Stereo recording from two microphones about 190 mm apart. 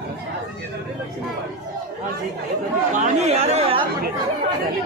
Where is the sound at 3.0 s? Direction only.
35° right (ahead or behind).